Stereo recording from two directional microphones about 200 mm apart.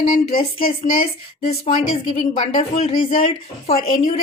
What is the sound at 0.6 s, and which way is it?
A woman's voice, 45° left (ahead or behind).